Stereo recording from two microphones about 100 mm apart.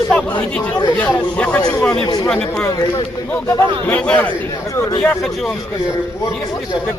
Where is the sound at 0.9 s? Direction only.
15° left (ahead or behind).